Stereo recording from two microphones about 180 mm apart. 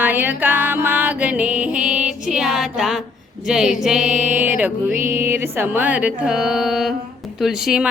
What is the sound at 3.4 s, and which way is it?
Music, centre (ahead or behind).